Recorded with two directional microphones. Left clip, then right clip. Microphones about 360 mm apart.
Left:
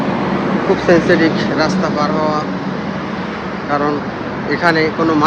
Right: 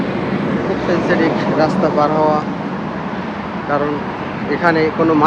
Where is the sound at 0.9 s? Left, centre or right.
Left.